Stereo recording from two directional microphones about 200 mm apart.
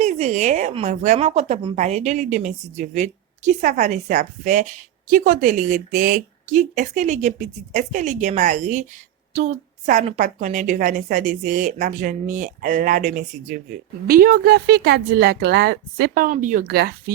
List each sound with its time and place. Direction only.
0.0 s a woman's voice: 35° right (ahead or behind); by 16.9 s 50° right (ahead or behind)